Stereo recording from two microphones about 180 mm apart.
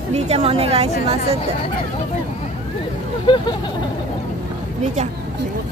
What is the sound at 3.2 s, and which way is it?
Vehicle, 25° left (ahead or behind).